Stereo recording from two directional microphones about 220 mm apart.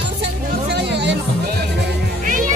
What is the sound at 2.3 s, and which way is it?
Music, 35° right (ahead or behind).